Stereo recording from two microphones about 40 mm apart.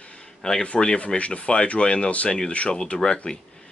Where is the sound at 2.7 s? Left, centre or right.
Centre.